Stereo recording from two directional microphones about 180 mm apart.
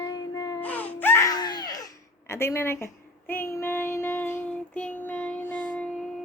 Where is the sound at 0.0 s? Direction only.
20° left (ahead or behind).